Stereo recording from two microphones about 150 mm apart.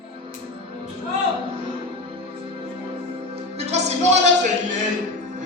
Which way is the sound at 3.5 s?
45° right (ahead or behind).